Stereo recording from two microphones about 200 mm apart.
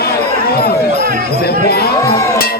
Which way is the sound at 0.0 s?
50° left (ahead or behind).